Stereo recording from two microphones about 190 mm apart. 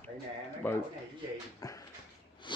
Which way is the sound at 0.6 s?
10° left (ahead or behind).